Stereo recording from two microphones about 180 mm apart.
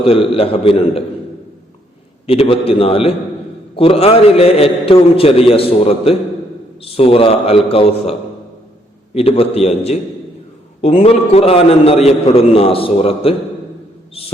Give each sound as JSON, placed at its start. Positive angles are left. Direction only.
{"t": 0.0, "sound": "a man's voice", "side_deg": 30}
{"t": 2.2, "sound": "a man's voice", "side_deg": 35}
{"t": 9.1, "sound": "a man's voice", "side_deg": 35}